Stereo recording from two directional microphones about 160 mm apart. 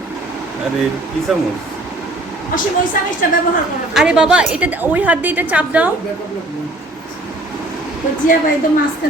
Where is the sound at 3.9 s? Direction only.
5° right (ahead or behind).